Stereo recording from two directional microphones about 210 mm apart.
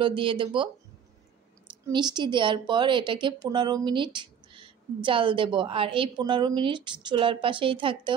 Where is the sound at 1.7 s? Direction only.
20° right (ahead or behind).